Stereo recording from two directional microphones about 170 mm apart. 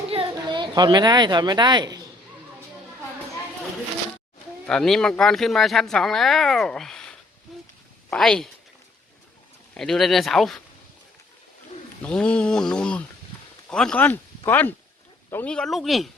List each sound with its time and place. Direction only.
0.1 s a woman's voice: 30° right (ahead or behind)
4.6 s speech: centre (ahead or behind)
9.7 s speech: centre (ahead or behind)
12.0 s speech: 5° left (ahead or behind)